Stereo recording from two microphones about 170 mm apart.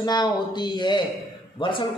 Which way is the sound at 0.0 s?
25° left (ahead or behind).